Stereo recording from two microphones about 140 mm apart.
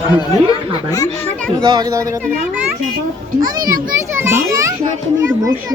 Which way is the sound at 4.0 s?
15° right (ahead or behind).